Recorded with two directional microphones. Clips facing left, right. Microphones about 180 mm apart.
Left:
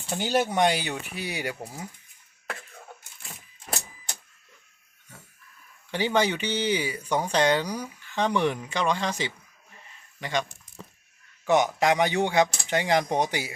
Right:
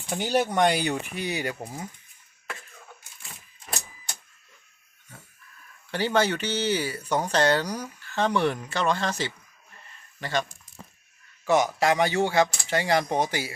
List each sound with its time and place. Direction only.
0.1 s speech: 5° left (ahead or behind)
1.5 s speech: 10° right (ahead or behind)
5.9 s speech: 15° left (ahead or behind)
9.7 s a sound: 15° left (ahead or behind)
11.4 s speech: 20° left (ahead or behind)